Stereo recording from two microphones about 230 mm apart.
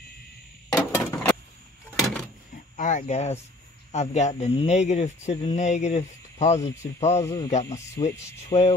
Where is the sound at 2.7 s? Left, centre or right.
Left.